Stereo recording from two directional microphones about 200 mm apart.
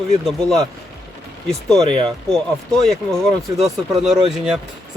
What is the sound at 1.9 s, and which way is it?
Speech, 25° right (ahead or behind).